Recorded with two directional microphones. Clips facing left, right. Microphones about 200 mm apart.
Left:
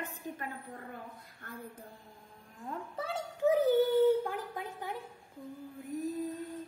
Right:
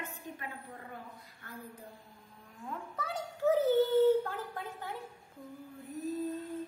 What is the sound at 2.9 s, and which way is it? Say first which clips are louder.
Speech: left 2 dB; 30° left (ahead or behind).